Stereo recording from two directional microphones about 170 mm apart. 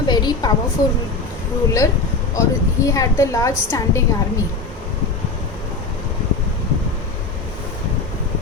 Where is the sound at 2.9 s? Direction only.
20° left (ahead or behind).